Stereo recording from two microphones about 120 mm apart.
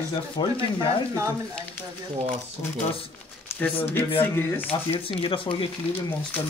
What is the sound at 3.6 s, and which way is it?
Speech, 15° left (ahead or behind).